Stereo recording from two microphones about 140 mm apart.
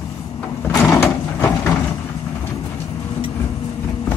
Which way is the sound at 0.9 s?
15° left (ahead or behind).